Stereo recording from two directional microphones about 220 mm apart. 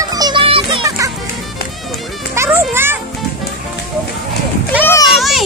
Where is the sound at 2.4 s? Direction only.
10° right (ahead or behind).